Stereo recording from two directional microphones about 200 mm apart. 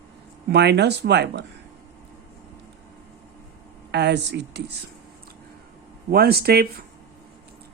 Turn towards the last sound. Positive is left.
turn(degrees=-50)  # may be behind; listen again after turning